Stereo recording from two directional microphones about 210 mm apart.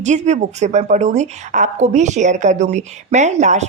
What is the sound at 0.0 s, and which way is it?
A woman's voice, 35° right (ahead or behind).